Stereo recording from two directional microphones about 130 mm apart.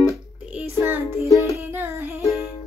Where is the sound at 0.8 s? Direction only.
20° right (ahead or behind).